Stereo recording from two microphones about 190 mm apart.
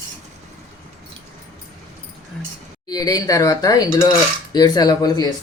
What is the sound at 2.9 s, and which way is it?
Speech, 20° left (ahead or behind).